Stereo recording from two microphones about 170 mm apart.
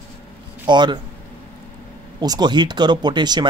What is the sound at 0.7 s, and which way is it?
Speech, 25° right (ahead or behind).